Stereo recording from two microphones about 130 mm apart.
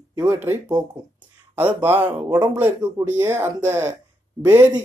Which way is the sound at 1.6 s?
15° right (ahead or behind).